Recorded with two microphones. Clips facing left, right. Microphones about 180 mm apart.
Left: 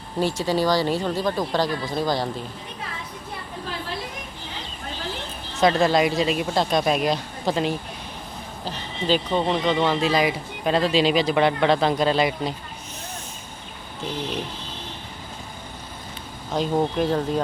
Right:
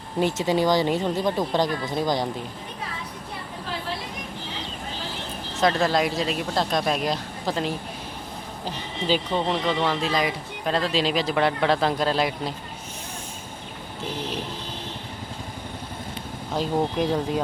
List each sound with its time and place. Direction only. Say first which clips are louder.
0.2 s speech: even; 20° right (ahead or behind)
5.5 s speech: left 3 dB; centre (ahead or behind)
16.6 s speech: left 2 dB; 10° right (ahead or behind)